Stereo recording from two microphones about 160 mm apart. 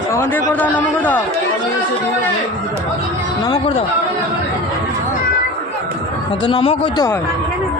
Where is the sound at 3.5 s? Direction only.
35° left (ahead or behind).